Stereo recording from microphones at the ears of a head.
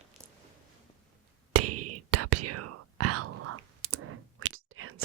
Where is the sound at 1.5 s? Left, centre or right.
Right.